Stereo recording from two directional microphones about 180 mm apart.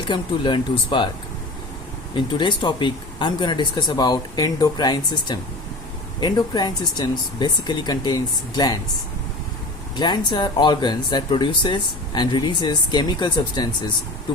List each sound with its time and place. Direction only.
0.1 s speech: 25° left (ahead or behind)
2.1 s speech: 25° left (ahead or behind)
9.9 s speech: 25° left (ahead or behind)